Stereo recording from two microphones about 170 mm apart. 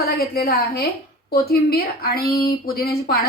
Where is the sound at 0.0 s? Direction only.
65° left (ahead or behind).